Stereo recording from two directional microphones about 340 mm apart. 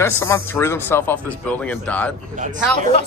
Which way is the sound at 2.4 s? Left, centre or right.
Right.